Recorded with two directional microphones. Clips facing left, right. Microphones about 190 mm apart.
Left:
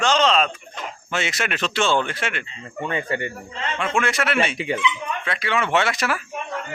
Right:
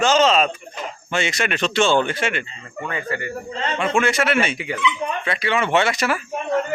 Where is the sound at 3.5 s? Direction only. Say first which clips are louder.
Right 7 dB; 35° right (ahead or behind).